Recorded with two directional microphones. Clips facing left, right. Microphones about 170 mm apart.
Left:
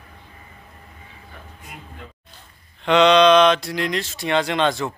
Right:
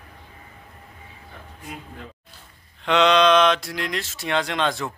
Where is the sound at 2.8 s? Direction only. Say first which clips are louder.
Left 4 dB; centre (ahead or behind).